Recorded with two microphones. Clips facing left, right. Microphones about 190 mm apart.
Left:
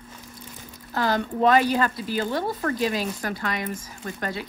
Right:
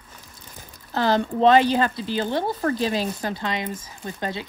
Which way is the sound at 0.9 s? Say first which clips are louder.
Right 3 dB; 25° right (ahead or behind).